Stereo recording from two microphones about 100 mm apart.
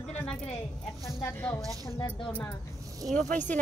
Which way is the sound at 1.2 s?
20° left (ahead or behind).